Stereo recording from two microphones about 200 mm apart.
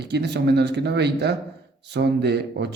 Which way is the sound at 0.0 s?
55° right (ahead or behind).